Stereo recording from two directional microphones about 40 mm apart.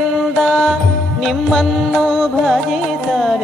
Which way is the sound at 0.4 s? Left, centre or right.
Centre.